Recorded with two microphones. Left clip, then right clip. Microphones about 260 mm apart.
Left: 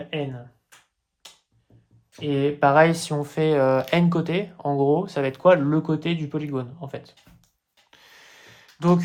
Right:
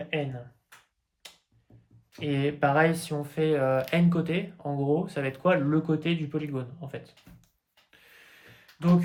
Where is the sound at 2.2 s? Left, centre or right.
Centre.